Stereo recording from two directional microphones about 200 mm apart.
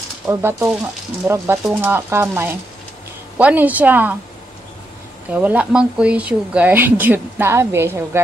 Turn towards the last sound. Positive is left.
turn(degrees=-10)  # may be behind; listen again after turning